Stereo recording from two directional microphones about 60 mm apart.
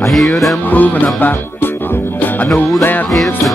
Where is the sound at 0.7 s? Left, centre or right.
Left.